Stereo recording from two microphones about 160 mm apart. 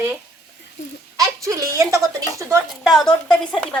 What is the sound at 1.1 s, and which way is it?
A woman's voice, 20° right (ahead or behind).